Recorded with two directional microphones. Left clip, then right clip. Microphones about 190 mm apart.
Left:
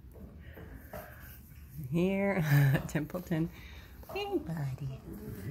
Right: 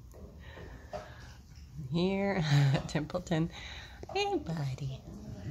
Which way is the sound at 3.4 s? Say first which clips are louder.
Right 1 dB; 20° right (ahead or behind).